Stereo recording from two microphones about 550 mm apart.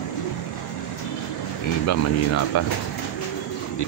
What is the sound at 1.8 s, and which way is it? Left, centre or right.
Speech, left.